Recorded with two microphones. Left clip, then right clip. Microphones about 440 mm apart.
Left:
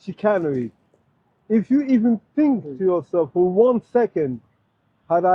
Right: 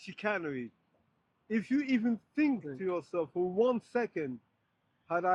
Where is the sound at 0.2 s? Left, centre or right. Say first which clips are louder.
Left 14 dB; centre.